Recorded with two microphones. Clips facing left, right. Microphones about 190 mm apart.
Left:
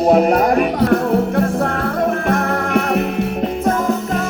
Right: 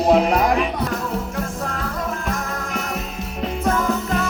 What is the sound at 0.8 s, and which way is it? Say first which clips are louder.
Music: left 10 dB; 60° left (ahead or behind).